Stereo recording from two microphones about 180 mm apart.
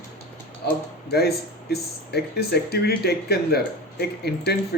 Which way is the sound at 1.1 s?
60° left (ahead or behind).